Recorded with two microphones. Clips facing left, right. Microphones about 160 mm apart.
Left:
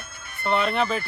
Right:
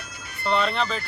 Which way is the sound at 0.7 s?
55° left (ahead or behind).